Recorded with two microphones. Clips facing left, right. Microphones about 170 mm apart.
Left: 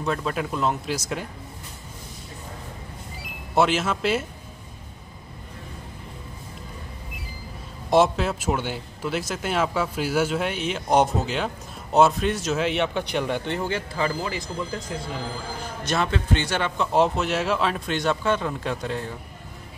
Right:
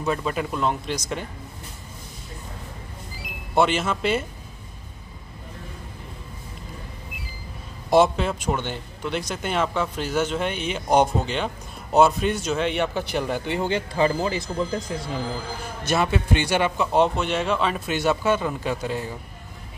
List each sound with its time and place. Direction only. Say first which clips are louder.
0.0 s a man's voice: right 1 dB; 5° right (ahead or behind)
3.5 s a man's voice: even; centre (ahead or behind)
7.9 s a man's voice: right 1 dB; centre (ahead or behind)
13.6 s speech: right 4 dB; 20° right (ahead or behind)
15.8 s a man's voice: right 2 dB; 10° right (ahead or behind)